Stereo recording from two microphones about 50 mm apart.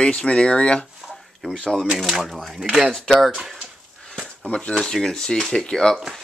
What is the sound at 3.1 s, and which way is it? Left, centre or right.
Speech, centre.